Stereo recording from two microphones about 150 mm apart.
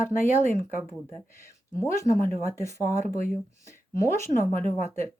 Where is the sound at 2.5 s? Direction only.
20° left (ahead or behind).